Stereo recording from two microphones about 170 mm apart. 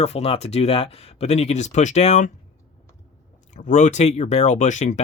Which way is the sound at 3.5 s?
45° left (ahead or behind).